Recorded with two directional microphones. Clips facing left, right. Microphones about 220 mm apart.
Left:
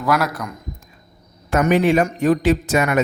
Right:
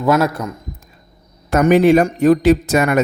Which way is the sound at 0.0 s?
25° right (ahead or behind).